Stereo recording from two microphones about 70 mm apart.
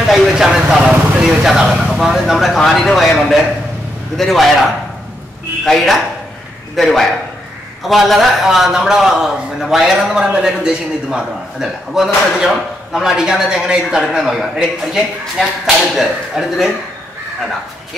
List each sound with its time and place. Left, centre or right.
0.0 s speech: centre
5.7 s a man's voice: centre